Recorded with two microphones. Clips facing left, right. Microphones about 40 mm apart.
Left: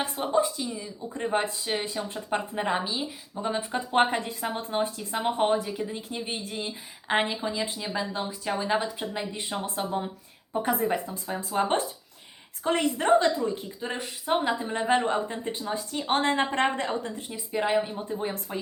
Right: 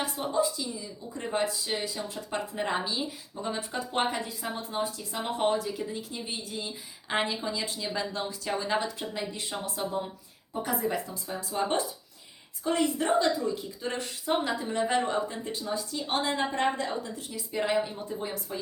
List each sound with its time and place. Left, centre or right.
0.0 s speech: left
2.6 s a woman's voice: centre
3.4 s speech: left
5.1 s a woman's voice: left
13.8 s speech: centre; by 17.1 s left
17.2 s speech: left
17.5 s speech: left